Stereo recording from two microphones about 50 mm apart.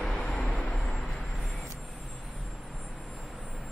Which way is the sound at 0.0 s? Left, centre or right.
Centre.